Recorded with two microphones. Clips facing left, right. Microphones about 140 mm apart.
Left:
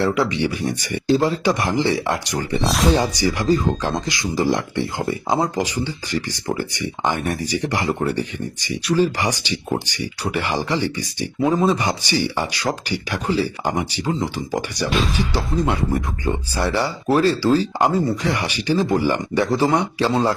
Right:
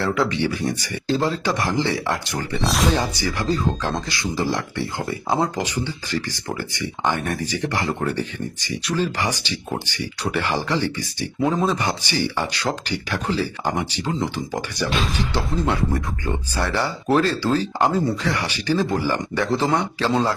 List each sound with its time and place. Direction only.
0.0 s speech: 15° left (ahead or behind)
2.6 s speech: centre (ahead or behind)
2.9 s speech: 15° left (ahead or behind)
15.2 s speech: 10° left (ahead or behind)